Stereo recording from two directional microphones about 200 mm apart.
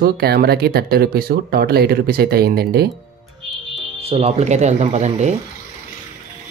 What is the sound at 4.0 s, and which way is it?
Speech, 30° right (ahead or behind).